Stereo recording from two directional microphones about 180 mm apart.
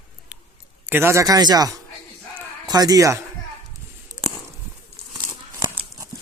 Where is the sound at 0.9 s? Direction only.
15° right (ahead or behind).